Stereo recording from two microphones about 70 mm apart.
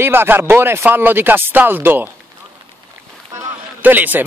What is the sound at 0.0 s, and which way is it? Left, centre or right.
Speech, right.